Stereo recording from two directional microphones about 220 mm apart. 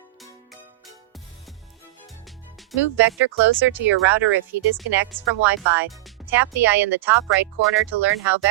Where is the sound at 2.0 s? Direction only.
Centre (ahead or behind).